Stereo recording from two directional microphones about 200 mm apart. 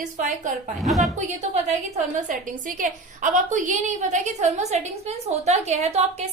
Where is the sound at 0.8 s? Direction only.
Centre (ahead or behind).